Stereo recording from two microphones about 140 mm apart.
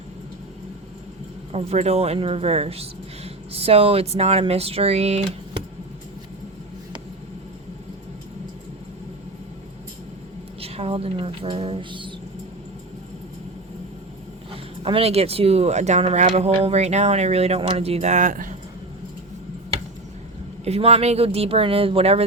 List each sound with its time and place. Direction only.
1.5 s speech: 50° right (ahead or behind)
10.6 s speech: 45° right (ahead or behind)
14.5 s speech: 40° right (ahead or behind); by 18.5 s 70° right (ahead or behind)
20.7 s speech: 50° right (ahead or behind)